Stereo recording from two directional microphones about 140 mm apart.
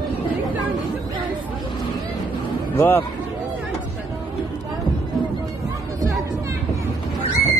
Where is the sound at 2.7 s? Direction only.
15° left (ahead or behind).